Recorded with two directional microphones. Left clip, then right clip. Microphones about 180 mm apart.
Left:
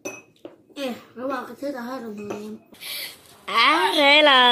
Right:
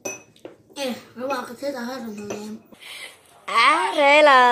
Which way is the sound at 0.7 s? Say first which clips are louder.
Right 2 dB; 5° left (ahead or behind).